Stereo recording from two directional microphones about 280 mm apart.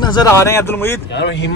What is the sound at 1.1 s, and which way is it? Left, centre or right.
Speech, left.